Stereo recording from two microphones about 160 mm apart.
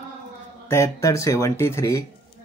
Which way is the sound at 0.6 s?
20° left (ahead or behind).